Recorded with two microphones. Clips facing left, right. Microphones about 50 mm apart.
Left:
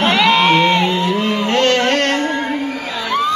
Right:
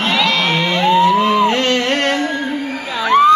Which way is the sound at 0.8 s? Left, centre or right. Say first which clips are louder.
Right 5 dB; centre.